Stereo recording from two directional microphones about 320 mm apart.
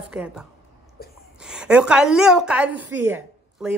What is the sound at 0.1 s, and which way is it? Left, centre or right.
Speech, centre.